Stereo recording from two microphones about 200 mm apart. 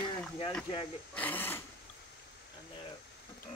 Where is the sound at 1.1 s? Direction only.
10° left (ahead or behind).